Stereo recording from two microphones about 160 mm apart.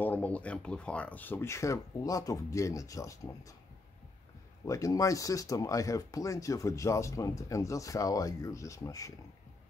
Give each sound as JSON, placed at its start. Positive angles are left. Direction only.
{"t": 0.0, "sound": "speech", "side_deg": 10}
{"t": 4.6, "sound": "speech", "side_deg": 20}